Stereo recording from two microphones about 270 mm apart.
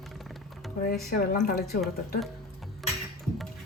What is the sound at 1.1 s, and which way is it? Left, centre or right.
Speech, left.